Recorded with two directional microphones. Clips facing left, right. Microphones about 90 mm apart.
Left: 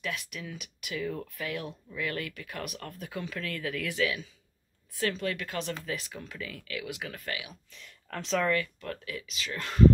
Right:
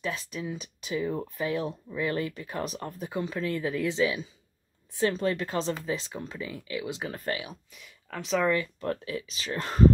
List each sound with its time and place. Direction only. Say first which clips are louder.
0.0 s speech: right 4 dB; 25° right (ahead or behind)
7.7 s speech: left 4 dB; 5° right (ahead or behind)
8.5 s speech: right 3 dB; 25° right (ahead or behind)